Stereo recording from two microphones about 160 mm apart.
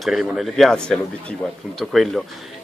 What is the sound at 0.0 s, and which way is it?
Speech, centre (ahead or behind).